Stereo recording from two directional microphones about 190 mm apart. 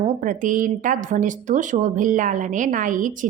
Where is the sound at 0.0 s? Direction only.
40° right (ahead or behind).